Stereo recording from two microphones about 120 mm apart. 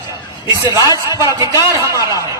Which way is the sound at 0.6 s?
30° right (ahead or behind).